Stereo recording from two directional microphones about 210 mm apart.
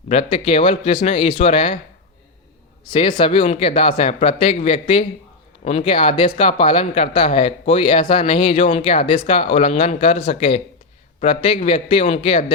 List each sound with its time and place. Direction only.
0.1 s speech: 30° left (ahead or behind)
2.8 s speech: 25° left (ahead or behind)